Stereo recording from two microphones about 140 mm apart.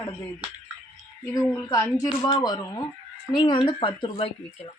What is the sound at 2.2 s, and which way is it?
A woman's voice, 35° left (ahead or behind).